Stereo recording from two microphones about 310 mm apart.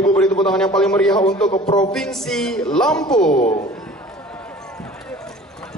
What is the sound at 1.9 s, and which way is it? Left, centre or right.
A woman's voice, centre.